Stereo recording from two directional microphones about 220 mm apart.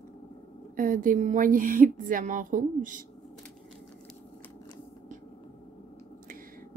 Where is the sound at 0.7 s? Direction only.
40° right (ahead or behind).